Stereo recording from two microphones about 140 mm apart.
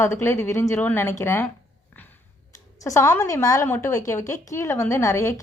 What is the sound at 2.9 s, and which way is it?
A woman's voice, 20° left (ahead or behind).